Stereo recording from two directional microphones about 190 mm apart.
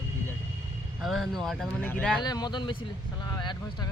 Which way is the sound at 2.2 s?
20° left (ahead or behind).